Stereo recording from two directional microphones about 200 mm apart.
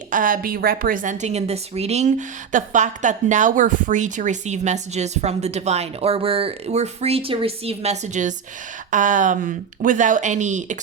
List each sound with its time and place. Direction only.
0.1 s a woman's voice: 40° right (ahead or behind)